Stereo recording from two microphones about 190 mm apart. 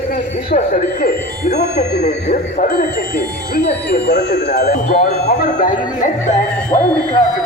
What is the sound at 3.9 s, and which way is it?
Speech, 60° left (ahead or behind).